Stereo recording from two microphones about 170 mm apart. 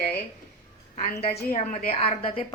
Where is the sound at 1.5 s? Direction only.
45° left (ahead or behind).